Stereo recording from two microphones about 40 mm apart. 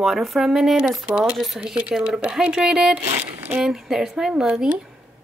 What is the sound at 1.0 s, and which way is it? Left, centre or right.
Speech, right.